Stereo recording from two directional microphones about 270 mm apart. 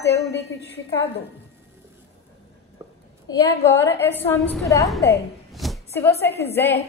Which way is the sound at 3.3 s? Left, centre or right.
Centre.